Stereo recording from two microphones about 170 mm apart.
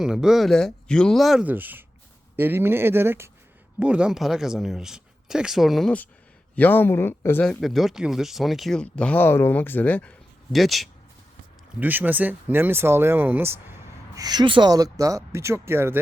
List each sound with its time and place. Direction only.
0.0 s speech: 5° right (ahead or behind); by 7.6 s 10° left (ahead or behind)
7.6 s speech: centre (ahead or behind)
11.8 s speech: 10° right (ahead or behind)
14.2 s speech: 25° right (ahead or behind)